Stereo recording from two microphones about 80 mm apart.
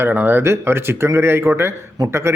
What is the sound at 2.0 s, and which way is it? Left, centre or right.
Speech, right.